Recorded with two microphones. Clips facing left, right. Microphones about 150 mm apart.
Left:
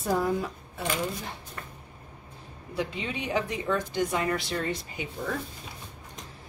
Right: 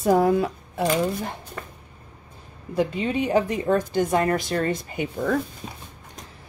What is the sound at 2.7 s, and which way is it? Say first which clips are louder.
A woman's voice: right 8 dB; 45° right (ahead or behind).